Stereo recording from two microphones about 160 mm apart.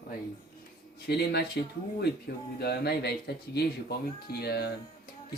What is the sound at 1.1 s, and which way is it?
Speech, 90° left.